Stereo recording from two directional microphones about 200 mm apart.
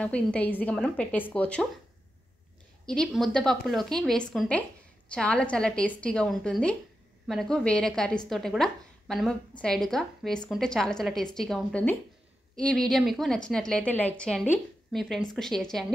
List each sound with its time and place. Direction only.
0.0 s speech: 5° left (ahead or behind)
2.9 s a woman's voice: centre (ahead or behind)